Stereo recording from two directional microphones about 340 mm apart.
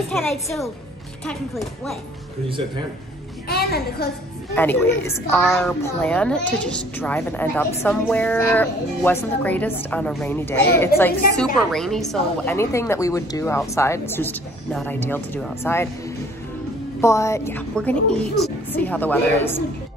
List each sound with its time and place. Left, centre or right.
0.1 s a child's voice: centre
3.4 s a child's voice: left
4.6 s a woman's voice: centre
17.0 s a child's voice: centre